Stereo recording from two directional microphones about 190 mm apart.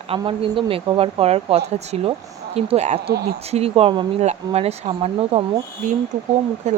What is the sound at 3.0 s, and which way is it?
Speech, 55° right (ahead or behind).